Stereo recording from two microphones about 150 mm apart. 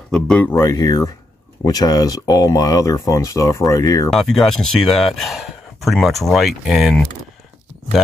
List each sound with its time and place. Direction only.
0.1 s speech: 10° left (ahead or behind)
4.1 s speech: centre (ahead or behind)